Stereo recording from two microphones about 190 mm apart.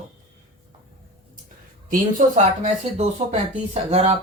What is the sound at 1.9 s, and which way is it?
Speech, 45° right (ahead or behind).